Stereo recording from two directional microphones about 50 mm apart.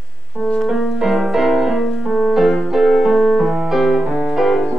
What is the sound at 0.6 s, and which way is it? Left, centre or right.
Music, centre.